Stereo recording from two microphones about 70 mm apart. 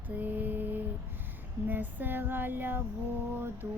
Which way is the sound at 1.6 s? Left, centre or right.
Right.